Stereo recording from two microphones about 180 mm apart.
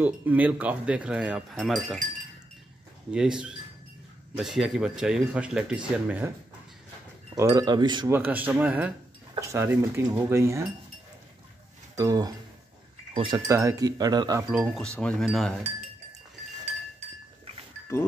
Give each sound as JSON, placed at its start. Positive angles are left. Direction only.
{"t": 0.0, "sound": "speech", "side_deg": -10}
{"t": 3.1, "sound": "speech", "side_deg": -5}
{"t": 7.3, "sound": "speech", "side_deg": -20}
{"t": 8.1, "sound": "speech", "side_deg": -10}
{"t": 12.0, "sound": "speech", "side_deg": -20}
{"t": 14.5, "sound": "speech", "side_deg": -5}
{"t": 14.8, "sound": "speech", "side_deg": 5}